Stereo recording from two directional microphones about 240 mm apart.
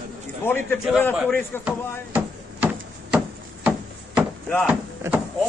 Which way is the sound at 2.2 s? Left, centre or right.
Centre.